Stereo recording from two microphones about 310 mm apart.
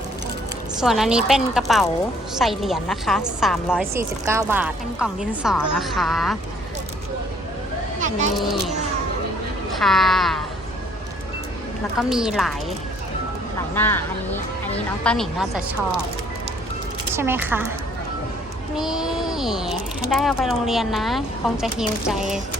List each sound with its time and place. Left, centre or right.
0.8 s a woman's voice: centre
7.9 s a sound: right
9.7 s a woman's voice: centre
11.9 s a woman's voice: centre
13.7 s speech: centre
15.0 s a woman's voice: centre
17.2 s a woman's voice: centre
18.8 s a woman's voice: centre